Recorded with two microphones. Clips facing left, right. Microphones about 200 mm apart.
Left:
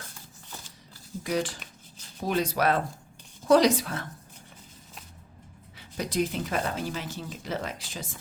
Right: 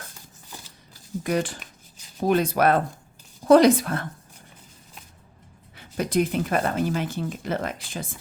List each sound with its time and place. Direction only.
1.2 s speech: 55° right (ahead or behind)
5.7 s speech: 55° right (ahead or behind)